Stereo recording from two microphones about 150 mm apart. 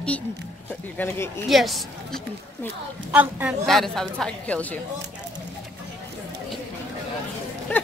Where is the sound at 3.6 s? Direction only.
Centre (ahead or behind).